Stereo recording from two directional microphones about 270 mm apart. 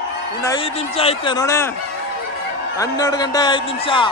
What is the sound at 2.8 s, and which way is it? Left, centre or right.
Music, centre.